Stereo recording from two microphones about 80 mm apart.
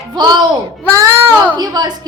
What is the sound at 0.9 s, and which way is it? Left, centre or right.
A woman's voice, right.